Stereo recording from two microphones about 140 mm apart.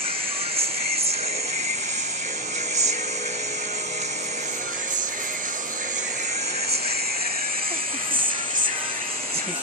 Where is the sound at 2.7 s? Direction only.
55° right (ahead or behind).